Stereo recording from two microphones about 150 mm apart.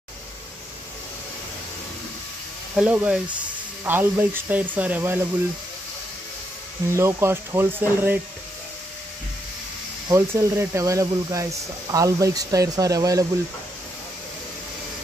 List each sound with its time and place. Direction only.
2.7 s speech: 10° right (ahead or behind)
6.9 s speech: 15° right (ahead or behind)
10.0 s speech: 20° right (ahead or behind)